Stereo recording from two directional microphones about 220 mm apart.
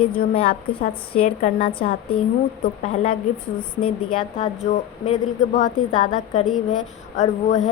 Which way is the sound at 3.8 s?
25° left (ahead or behind).